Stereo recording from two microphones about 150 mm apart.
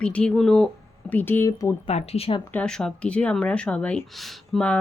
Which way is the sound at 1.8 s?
45° left (ahead or behind).